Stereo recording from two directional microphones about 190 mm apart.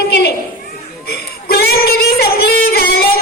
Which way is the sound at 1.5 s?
55° left (ahead or behind).